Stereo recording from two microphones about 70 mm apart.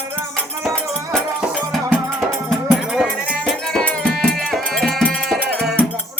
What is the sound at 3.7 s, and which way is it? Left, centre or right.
Music, centre.